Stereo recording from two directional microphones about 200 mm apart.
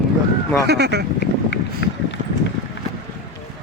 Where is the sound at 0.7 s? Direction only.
55° right (ahead or behind).